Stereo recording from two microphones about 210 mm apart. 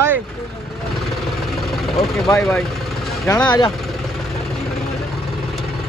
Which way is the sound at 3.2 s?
15° left (ahead or behind).